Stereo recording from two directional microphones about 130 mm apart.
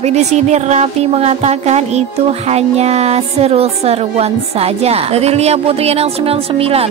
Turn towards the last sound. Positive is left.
turn(degrees=-50)  # may be behind; listen again after turning